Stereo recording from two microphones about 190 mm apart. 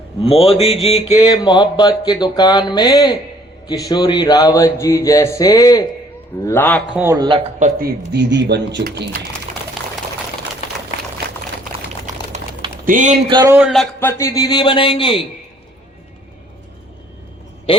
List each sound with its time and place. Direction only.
0.2 s a man's voice: 30° left (ahead or behind); by 6.8 s 10° left (ahead or behind)
6.9 s a man's voice: 15° right (ahead or behind)
7.3 s a man's voice: 30° right (ahead or behind)
7.8 s speech: 55° right (ahead or behind)
11.9 s a sound: 35° right (ahead or behind)
12.8 s speech: 45° right (ahead or behind)
13.3 s a man's voice: 15° right (ahead or behind)
13.6 s speech: centre (ahead or behind)
14.0 s speech: 15° left (ahead or behind)